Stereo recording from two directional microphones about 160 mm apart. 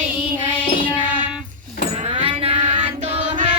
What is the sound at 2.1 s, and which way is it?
Music, 35° right (ahead or behind).